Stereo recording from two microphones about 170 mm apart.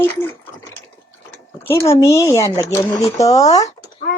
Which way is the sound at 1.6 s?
15° left (ahead or behind).